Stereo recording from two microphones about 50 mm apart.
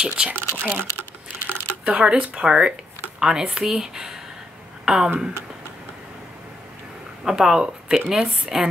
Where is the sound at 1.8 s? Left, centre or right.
Right.